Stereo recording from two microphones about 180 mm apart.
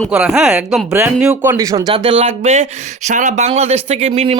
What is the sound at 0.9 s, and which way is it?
Speech, 15° right (ahead or behind).